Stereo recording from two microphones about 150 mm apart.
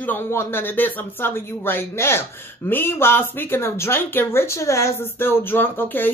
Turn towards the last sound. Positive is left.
turn(degrees=15)  # may be behind; listen again after turning